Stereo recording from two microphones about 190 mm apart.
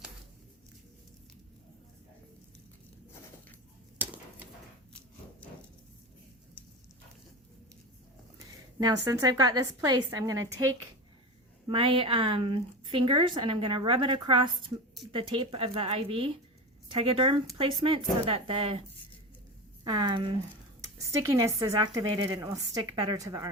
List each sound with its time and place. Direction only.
3.9 s a sound: 10° right (ahead or behind)
8.8 s a woman's voice: 20° right (ahead or behind)
11.7 s a woman's voice: 30° right (ahead or behind)
19.8 s a woman's voice: 20° right (ahead or behind)